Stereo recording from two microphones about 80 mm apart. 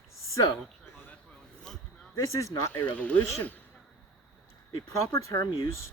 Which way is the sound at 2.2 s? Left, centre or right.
Left.